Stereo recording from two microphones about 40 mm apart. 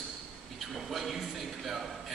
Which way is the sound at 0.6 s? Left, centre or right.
Centre.